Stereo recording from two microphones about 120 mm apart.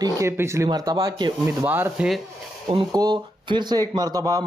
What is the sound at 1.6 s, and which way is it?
Speech, 15° right (ahead or behind).